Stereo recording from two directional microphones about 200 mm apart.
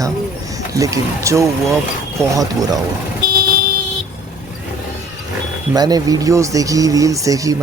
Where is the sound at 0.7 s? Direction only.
15° right (ahead or behind).